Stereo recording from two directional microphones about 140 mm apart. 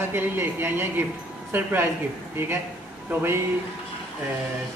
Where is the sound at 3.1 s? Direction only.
15° right (ahead or behind).